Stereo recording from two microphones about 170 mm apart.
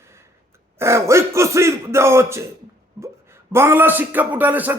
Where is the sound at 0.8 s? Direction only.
15° right (ahead or behind).